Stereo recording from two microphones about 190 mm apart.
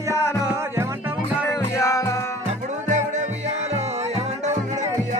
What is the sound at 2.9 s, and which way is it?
Music, 40° right (ahead or behind).